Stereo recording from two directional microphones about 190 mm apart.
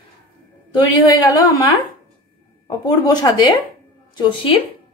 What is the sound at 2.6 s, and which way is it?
Speech, 20° left (ahead or behind).